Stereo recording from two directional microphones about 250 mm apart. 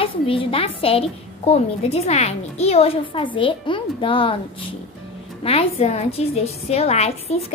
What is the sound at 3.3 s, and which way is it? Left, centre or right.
A woman's voice, centre.